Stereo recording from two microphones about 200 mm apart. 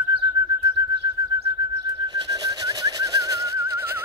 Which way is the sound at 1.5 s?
20° right (ahead or behind).